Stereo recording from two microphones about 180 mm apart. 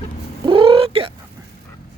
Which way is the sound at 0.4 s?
30° right (ahead or behind).